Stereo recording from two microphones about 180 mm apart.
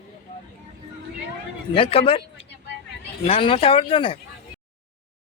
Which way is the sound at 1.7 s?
30° left (ahead or behind).